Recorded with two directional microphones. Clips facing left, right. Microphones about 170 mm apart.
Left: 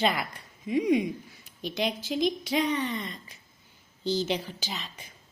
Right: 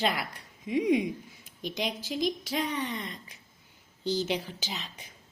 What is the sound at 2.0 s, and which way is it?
Speech, 65° left (ahead or behind).